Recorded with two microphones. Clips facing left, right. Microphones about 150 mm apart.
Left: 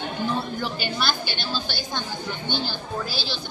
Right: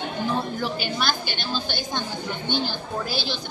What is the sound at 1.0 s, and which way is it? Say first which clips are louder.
A woman's voice: even; 50° right (ahead or behind).